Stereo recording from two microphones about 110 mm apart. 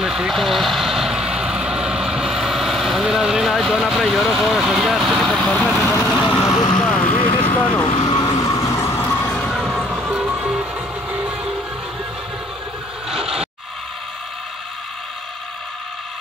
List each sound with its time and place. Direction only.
0.0 s vehicle: 5° right (ahead or behind)
5.7 s speech: 20° left (ahead or behind)
6.2 s vehicle: 40° left (ahead or behind)
6.8 s vehicle: 10° left (ahead or behind)
7.2 s vehicle: 55° left (ahead or behind)
8.1 s music: 40° left (ahead or behind); by 9.5 s 15° left (ahead or behind)
9.5 s music: 5° right (ahead or behind)
13.1 s a sound: 5° right (ahead or behind)